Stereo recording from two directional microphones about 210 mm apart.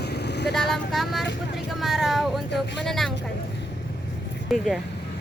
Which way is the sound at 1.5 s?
Centre (ahead or behind).